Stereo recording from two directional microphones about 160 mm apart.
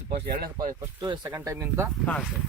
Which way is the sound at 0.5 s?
25° right (ahead or behind).